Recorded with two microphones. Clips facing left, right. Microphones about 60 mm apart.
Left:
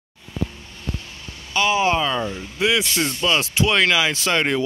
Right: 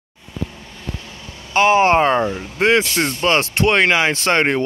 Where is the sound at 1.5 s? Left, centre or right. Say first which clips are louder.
Right 6 dB; right.